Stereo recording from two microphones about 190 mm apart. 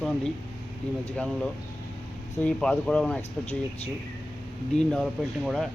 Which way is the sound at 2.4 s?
5° left (ahead or behind).